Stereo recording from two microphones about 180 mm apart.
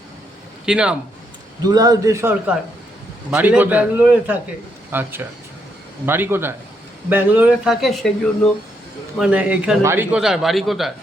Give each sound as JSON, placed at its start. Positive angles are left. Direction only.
{"t": 0.6, "sound": "a man's voice", "side_deg": -5}
{"t": 1.6, "sound": "a man's voice", "side_deg": -20}
{"t": 9.1, "sound": "a man's voice", "side_deg": -5}